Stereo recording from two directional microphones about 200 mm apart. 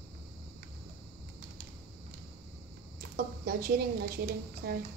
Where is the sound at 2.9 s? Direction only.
50° right (ahead or behind).